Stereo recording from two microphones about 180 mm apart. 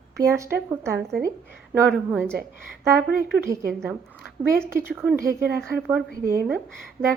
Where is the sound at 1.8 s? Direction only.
Centre (ahead or behind).